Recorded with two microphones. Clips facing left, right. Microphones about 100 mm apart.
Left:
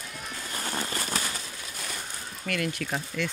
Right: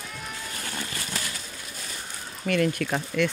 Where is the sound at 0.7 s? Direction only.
35° left (ahead or behind).